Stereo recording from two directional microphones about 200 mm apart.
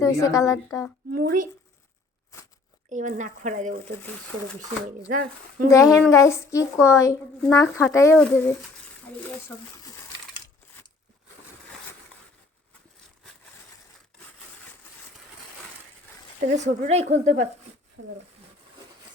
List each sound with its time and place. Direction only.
0.0 s a woman's voice: 15° left (ahead or behind)
1.1 s speech: 45° right (ahead or behind)
2.9 s a woman's voice: 40° right (ahead or behind)
5.6 s a woman's voice: 15° left (ahead or behind)
9.5 s a woman's voice: 5° left (ahead or behind)
16.5 s a woman's voice: 35° right (ahead or behind)
18.0 s speech: 65° right (ahead or behind)